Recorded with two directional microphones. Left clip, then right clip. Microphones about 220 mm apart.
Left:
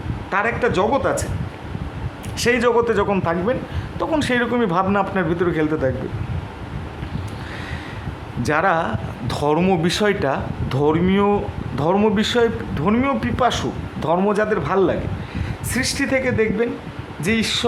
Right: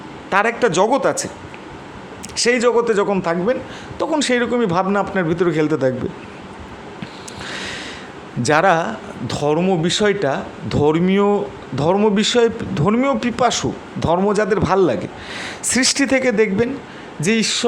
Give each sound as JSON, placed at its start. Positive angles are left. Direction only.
{"t": 0.3, "sound": "a man's voice", "side_deg": -25}
{"t": 2.3, "sound": "speech", "side_deg": -15}
{"t": 7.5, "sound": "a sound", "side_deg": -20}
{"t": 8.4, "sound": "a man's voice", "side_deg": -20}